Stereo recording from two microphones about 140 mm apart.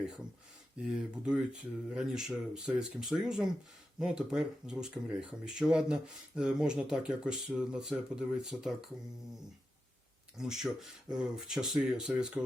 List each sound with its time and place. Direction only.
0.8 s speech: 5° right (ahead or behind)
10.3 s speech: 5° right (ahead or behind)